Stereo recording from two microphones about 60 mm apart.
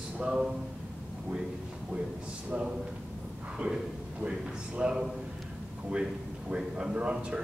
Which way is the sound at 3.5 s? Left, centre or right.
Centre.